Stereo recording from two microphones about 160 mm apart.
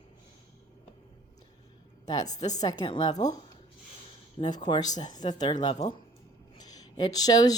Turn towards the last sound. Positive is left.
turn(degrees=25)  # may be behind; listen again after turning